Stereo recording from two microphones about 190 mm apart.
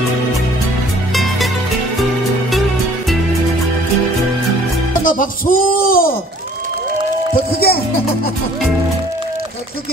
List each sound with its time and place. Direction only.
1.1 s music: centre (ahead or behind)
5.0 s speech: 45° left (ahead or behind)
7.3 s speech: 55° left (ahead or behind)